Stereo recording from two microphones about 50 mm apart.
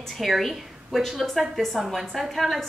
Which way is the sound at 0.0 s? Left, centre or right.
Centre.